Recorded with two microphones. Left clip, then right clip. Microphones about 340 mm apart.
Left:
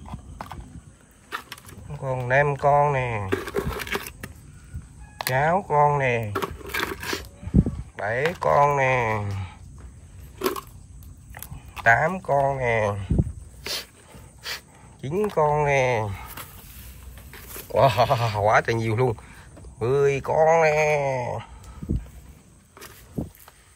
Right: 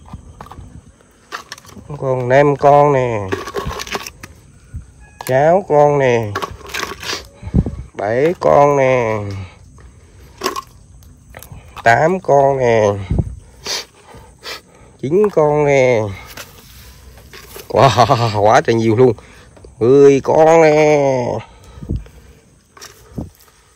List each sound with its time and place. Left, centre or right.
2.0 s speech: centre
3.7 s a sound: centre
5.2 s speech: centre
6.3 s coin: right
11.3 s speech: centre
13.6 s a sound: right
14.4 s speech: centre
17.3 s speech: centre